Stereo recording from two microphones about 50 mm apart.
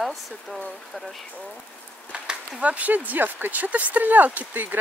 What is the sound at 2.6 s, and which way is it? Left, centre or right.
Speech, right.